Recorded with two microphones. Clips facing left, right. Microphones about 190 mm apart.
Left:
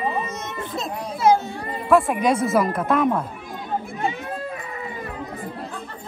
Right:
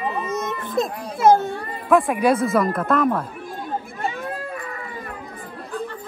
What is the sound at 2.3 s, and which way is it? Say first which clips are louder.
Speech: even; 55° right (ahead or behind).